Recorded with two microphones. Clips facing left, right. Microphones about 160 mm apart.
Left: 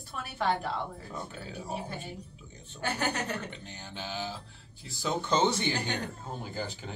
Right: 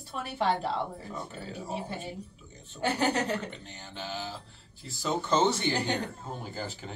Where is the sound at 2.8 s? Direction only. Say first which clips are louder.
Right 4 dB; 30° right (ahead or behind).